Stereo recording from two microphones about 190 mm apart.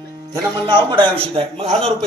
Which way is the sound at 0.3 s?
25° right (ahead or behind).